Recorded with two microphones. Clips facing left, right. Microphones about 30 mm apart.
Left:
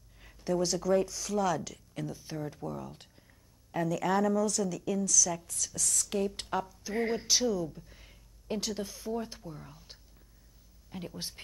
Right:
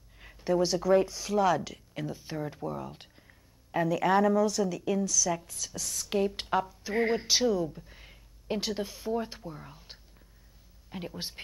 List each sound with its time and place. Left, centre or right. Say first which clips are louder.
0.2 s a woman's voice: right 4 dB; right